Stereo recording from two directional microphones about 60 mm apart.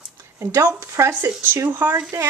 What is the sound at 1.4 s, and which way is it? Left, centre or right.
Speech, right.